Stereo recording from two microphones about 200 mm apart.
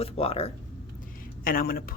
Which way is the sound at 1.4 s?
45° left (ahead or behind).